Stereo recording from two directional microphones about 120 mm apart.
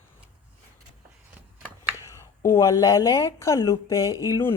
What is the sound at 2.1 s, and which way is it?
A woman's voice, 20° left (ahead or behind).